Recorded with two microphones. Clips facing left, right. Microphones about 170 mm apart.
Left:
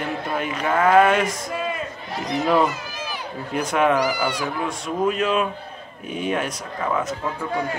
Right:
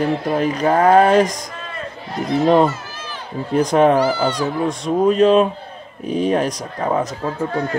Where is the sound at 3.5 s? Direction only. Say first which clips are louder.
Right 6 dB; 35° right (ahead or behind).